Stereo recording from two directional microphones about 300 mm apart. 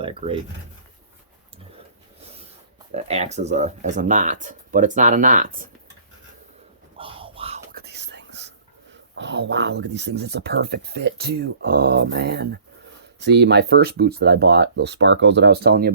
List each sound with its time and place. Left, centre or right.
0.0 s speech: centre
2.9 s speech: right
6.9 s speech: centre